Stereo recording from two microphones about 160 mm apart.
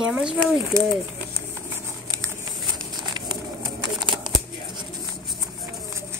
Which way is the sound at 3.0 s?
25° right (ahead or behind).